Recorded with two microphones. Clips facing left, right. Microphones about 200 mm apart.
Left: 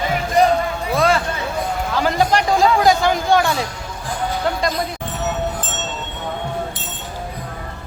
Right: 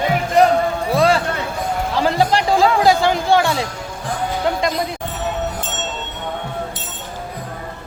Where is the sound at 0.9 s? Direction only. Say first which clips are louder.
Right 1 dB; 35° right (ahead or behind).